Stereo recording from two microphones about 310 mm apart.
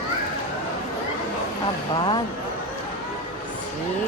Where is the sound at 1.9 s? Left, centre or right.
Centre.